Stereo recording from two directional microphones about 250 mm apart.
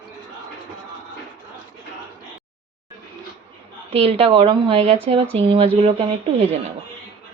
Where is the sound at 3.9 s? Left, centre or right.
Right.